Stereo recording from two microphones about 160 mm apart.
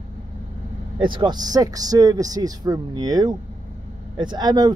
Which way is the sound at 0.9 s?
30° right (ahead or behind).